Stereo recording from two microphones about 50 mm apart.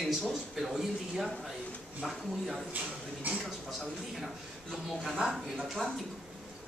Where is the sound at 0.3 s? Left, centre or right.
Centre.